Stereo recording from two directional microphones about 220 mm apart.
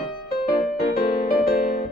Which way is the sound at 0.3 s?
45° left (ahead or behind).